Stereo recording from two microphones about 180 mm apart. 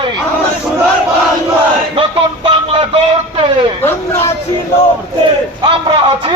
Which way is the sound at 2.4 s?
25° right (ahead or behind).